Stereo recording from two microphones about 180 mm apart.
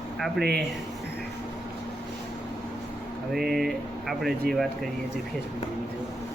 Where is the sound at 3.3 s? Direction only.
Centre (ahead or behind).